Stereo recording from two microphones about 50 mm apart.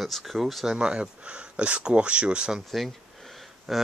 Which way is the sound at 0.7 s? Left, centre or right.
Centre.